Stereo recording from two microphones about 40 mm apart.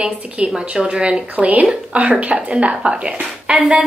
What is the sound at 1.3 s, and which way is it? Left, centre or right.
A woman's voice, right.